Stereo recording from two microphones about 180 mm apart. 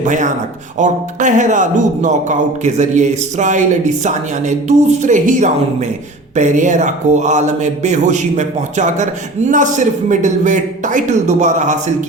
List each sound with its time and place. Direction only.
0.0 s speech: 45° right (ahead or behind)